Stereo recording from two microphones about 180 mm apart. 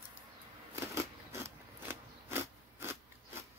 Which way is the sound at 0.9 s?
15° right (ahead or behind).